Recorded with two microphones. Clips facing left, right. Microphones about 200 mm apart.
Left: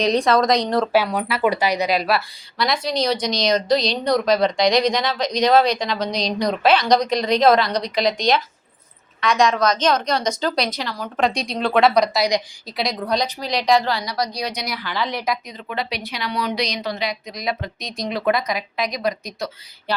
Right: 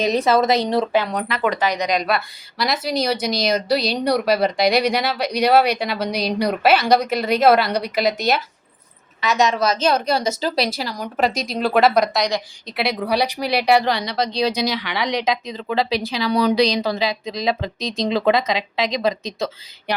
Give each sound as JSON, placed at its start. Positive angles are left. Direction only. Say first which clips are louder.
{"t": 0.0, "sound": "a woman's voice", "louder": "even", "side_deg": -5}
{"t": 14.6, "sound": "speech", "louder": "right 4 dB", "side_deg": -85}
{"t": 15.4, "sound": "speech", "louder": "right 6 dB", "side_deg": -30}